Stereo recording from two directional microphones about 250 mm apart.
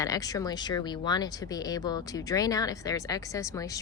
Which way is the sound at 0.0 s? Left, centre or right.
Centre.